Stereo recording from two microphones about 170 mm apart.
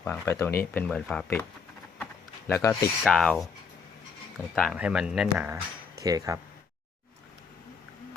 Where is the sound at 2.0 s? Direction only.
15° left (ahead or behind).